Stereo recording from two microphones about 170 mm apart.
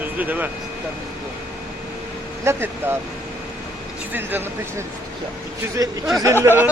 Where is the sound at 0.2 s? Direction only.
10° right (ahead or behind).